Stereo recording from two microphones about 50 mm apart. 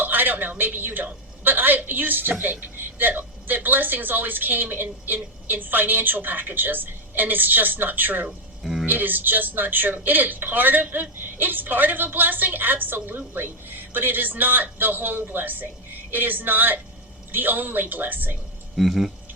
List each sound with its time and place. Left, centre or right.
0.0 s speech: right
8.6 s a sound: centre
8.9 s speech: right
18.8 s speech: centre